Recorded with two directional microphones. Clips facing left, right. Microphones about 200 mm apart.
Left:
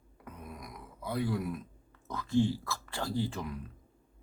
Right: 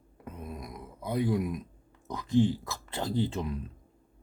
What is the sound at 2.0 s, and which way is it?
Speech, 15° right (ahead or behind).